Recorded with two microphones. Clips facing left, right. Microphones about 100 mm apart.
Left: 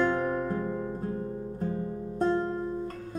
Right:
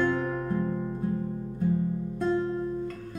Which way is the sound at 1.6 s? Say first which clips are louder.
Right 6 dB; 40° left (ahead or behind).